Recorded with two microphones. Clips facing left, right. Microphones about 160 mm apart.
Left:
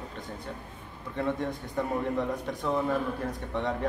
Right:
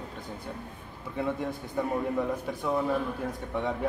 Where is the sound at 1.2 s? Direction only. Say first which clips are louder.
Left 1 dB; 5° right (ahead or behind).